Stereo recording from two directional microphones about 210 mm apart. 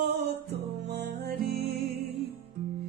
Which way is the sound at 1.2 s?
50° right (ahead or behind).